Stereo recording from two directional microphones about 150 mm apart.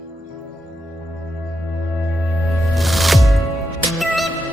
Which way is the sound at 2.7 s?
Centre (ahead or behind).